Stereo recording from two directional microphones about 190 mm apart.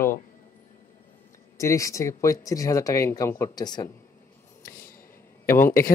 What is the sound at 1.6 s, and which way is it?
Speech, 15° left (ahead or behind).